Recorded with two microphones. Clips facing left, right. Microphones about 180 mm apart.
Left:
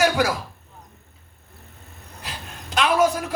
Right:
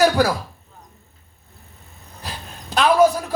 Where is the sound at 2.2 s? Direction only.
35° right (ahead or behind).